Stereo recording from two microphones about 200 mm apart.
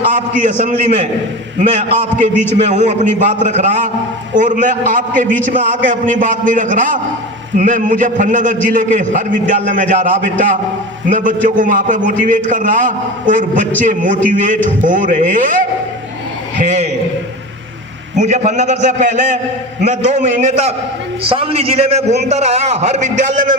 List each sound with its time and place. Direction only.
0.4 s a man's voice: 35° right (ahead or behind)
18.2 s a man's voice: 35° right (ahead or behind)